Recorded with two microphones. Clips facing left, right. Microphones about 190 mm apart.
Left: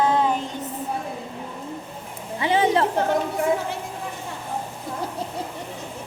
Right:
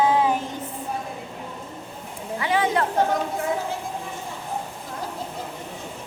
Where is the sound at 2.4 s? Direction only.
25° left (ahead or behind).